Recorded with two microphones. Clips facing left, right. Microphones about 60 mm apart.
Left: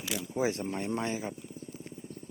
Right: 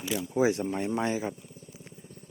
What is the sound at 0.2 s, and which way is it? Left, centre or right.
Speech, right.